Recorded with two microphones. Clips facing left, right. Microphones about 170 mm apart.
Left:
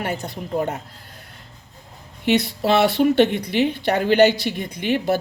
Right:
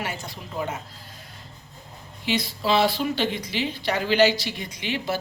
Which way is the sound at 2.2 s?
60° left (ahead or behind).